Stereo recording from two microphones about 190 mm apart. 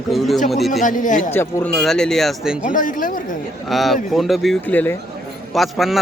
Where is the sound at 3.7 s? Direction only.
Centre (ahead or behind).